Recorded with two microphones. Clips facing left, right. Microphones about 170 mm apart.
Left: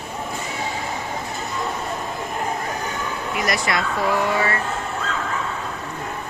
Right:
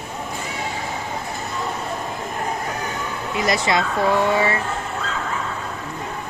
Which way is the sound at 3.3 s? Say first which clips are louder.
Right 4 dB; 25° right (ahead or behind).